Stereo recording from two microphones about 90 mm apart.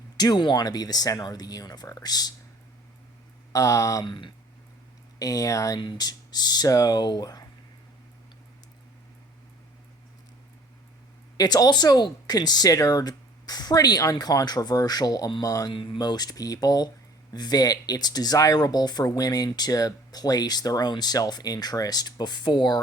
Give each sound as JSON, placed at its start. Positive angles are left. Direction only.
{"t": 0.2, "sound": "speech", "side_deg": 55}
{"t": 3.5, "sound": "speech", "side_deg": 40}
{"t": 4.0, "sound": "speech", "side_deg": 60}
{"t": 5.2, "sound": "speech", "side_deg": 40}
{"t": 5.8, "sound": "speech", "side_deg": 55}
{"t": 11.3, "sound": "speech", "side_deg": 50}
{"t": 15.7, "sound": "speech", "side_deg": 70}
{"t": 16.0, "sound": "speech", "side_deg": 50}